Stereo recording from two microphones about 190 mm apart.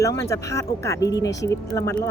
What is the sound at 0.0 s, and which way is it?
Speech, 15° left (ahead or behind).